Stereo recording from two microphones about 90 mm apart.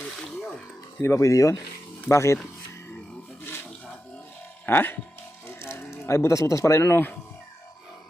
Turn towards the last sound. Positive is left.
turn(degrees=25)  # may be behind; listen again after turning